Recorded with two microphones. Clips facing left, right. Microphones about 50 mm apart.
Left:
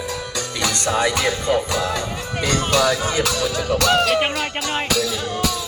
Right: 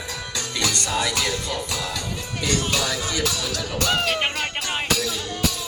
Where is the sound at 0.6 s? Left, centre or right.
Left.